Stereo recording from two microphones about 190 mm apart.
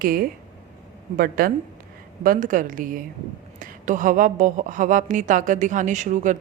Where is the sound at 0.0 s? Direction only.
50° right (ahead or behind).